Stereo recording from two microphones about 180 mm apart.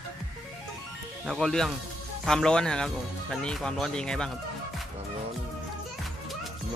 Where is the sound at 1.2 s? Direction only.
Centre (ahead or behind).